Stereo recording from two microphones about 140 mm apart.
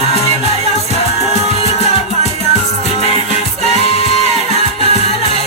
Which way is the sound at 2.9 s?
45° left (ahead or behind).